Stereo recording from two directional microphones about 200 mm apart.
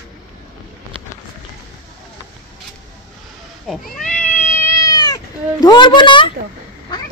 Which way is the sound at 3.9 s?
5° left (ahead or behind).